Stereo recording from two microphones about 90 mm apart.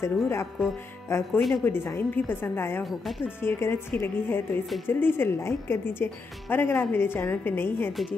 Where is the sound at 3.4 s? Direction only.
25° left (ahead or behind).